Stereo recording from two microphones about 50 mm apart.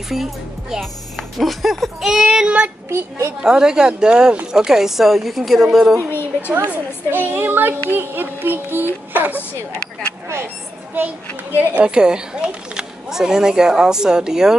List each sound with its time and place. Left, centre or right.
0.1 s speech: centre
2.2 s child singing: right
2.9 s a woman's voice: right
3.4 s speech: centre
6.0 s a woman's voice: left
7.1 s a child's voice: right
11.0 s a woman's voice: right
11.8 s speech: centre